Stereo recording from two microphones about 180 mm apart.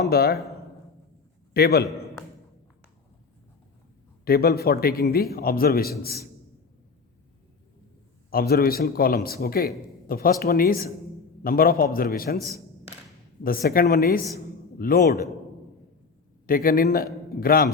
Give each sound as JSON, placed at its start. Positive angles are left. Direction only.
{"t": 0.0, "sound": "a man's voice", "side_deg": 60}
{"t": 1.5, "sound": "a man's voice", "side_deg": 60}
{"t": 4.3, "sound": "a man's voice", "side_deg": 60}
{"t": 8.3, "sound": "a man's voice", "side_deg": 55}
{"t": 13.4, "sound": "a man's voice", "side_deg": 55}
{"t": 16.5, "sound": "a man's voice", "side_deg": 55}